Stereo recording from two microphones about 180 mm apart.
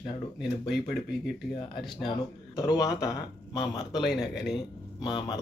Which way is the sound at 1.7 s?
Centre (ahead or behind).